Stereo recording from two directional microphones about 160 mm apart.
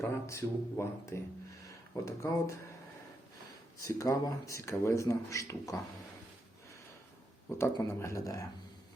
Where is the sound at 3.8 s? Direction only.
20° left (ahead or behind).